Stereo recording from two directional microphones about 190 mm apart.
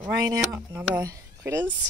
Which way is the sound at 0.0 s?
15° right (ahead or behind).